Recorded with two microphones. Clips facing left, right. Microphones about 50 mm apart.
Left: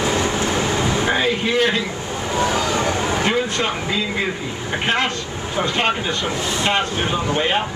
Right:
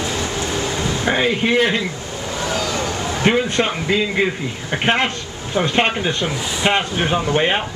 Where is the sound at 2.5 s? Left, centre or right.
Left.